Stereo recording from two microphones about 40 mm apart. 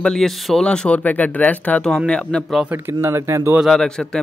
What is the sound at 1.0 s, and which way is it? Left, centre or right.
Speech, left.